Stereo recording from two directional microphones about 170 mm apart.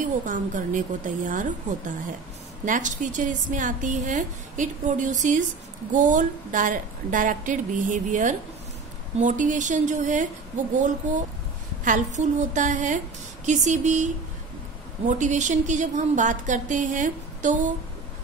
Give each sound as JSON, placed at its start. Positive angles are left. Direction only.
{"t": 0.0, "sound": "a woman's voice", "side_deg": -50}